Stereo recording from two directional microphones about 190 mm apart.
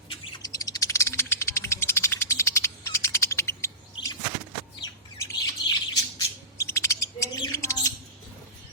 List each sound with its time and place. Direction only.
0.1 s bird: 20° left (ahead or behind)
3.9 s vehicle: 20° left (ahead or behind)
4.8 s bird: 20° left (ahead or behind)